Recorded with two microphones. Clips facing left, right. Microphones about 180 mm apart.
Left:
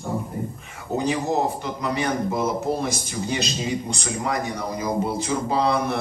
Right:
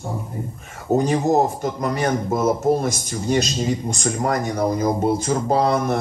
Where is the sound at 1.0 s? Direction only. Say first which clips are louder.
Right 4 dB; 45° right (ahead or behind).